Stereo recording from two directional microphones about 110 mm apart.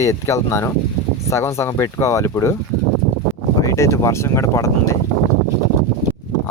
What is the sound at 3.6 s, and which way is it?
Speech, 25° left (ahead or behind).